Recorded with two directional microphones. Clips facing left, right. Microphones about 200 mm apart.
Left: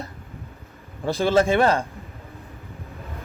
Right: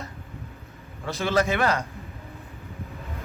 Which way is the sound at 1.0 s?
30° left (ahead or behind).